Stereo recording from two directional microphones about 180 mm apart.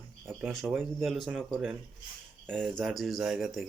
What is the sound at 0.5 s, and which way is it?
Speech, centre (ahead or behind).